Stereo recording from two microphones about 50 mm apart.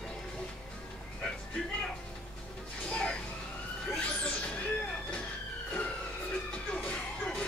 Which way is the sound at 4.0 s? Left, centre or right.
Left.